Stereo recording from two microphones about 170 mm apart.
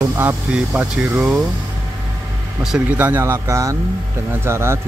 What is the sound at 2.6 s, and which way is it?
Speech, 5° right (ahead or behind).